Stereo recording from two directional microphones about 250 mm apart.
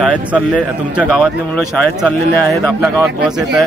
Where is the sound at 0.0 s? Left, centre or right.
Centre.